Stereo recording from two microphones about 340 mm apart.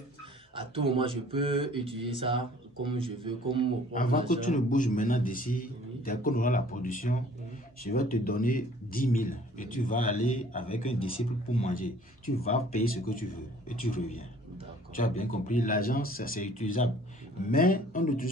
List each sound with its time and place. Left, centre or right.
0.6 s speech: centre
3.9 s a man's voice: left
15.0 s a man's voice: left